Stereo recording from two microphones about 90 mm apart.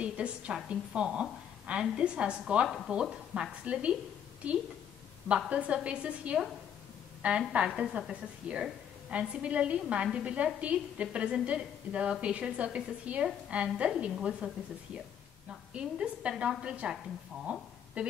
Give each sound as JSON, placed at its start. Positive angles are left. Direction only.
{"t": 0.0, "sound": "a woman's voice", "side_deg": -15}
{"t": 5.5, "sound": "a woman's voice", "side_deg": -15}
{"t": 15.7, "sound": "a woman's voice", "side_deg": -15}